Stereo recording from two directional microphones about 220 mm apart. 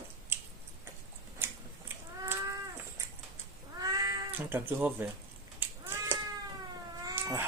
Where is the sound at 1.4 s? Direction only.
10° right (ahead or behind).